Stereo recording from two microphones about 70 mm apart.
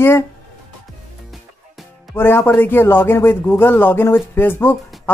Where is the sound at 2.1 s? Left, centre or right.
Left.